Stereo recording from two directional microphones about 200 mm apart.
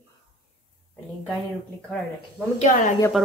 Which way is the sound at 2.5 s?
35° left (ahead or behind).